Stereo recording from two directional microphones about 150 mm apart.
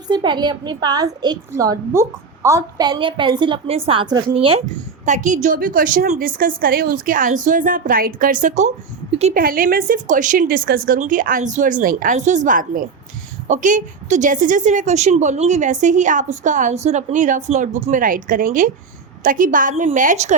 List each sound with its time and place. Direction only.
0.1 s a woman's voice: 30° right (ahead or behind)
5.0 s a woman's voice: 55° right (ahead or behind)
9.3 s a woman's voice: 70° right (ahead or behind); by 20.3 s 55° right (ahead or behind)